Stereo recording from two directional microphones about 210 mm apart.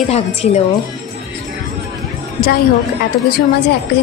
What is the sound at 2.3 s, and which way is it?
Speech, 45° left (ahead or behind).